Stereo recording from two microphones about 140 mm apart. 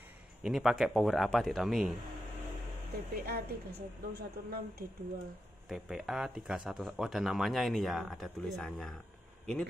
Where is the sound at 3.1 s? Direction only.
90° right.